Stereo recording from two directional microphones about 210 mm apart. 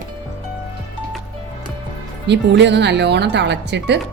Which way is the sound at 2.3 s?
55° right (ahead or behind).